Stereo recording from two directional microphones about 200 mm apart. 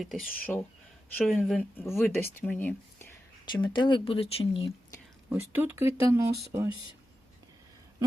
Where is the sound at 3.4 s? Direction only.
20° left (ahead or behind).